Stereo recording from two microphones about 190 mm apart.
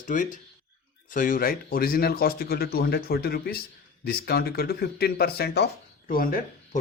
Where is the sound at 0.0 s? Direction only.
45° left (ahead or behind).